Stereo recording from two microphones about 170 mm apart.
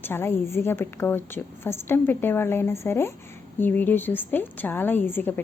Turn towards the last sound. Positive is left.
turn(degrees=10)  # may be behind; listen again after turning